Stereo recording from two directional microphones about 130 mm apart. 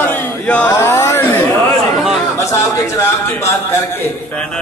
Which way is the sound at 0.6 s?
20° left (ahead or behind).